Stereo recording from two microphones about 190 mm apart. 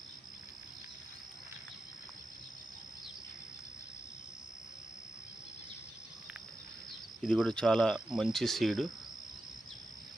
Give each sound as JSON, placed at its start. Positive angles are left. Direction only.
{"t": 7.2, "sound": "speech", "side_deg": 5}